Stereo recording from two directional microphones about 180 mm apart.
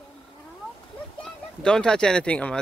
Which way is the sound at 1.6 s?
5° left (ahead or behind).